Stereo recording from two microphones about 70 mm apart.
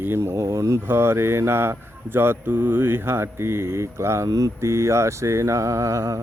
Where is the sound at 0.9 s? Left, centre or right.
Right.